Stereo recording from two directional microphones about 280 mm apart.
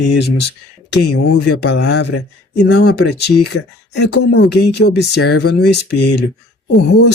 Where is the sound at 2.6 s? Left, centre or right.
Left.